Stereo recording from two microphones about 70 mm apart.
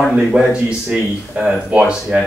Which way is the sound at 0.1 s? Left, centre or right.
Centre.